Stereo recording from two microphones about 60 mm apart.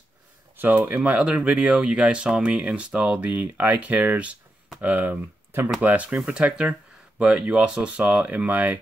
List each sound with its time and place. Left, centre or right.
0.6 s speech: right